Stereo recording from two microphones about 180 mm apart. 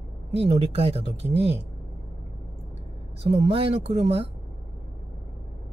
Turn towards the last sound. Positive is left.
turn(degrees=-35)  # may be behind; listen again after turning